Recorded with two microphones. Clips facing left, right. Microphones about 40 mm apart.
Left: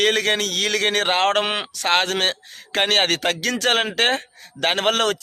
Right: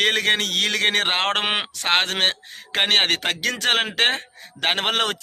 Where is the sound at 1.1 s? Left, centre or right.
Centre.